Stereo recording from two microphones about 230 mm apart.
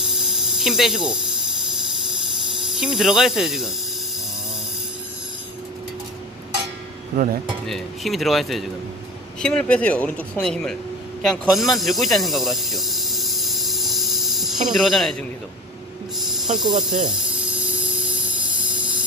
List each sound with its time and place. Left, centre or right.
0.6 s a man's voice: centre
2.8 s a man's voice: centre
7.7 s a man's voice: centre
11.2 s snake: centre
14.7 s a man's voice: centre
16.1 s snake: centre
16.6 s speech: centre
17.4 s a sound: centre